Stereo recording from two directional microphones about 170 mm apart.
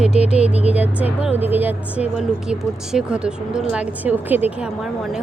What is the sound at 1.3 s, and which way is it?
Speech, 10° right (ahead or behind).